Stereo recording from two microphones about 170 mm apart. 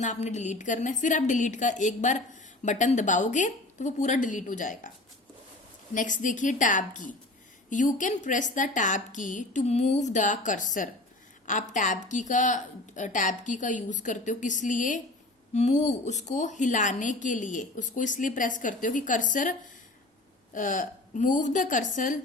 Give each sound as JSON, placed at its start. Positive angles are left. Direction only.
{"t": 0.0, "sound": "a woman's voice", "side_deg": 45}
{"t": 5.9, "sound": "a woman's voice", "side_deg": 50}